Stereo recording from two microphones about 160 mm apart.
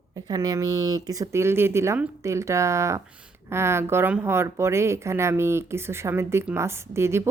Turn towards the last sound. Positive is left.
turn(degrees=-15)  # may be behind; listen again after turning